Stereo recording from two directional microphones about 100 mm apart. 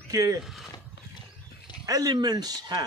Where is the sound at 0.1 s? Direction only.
35° right (ahead or behind).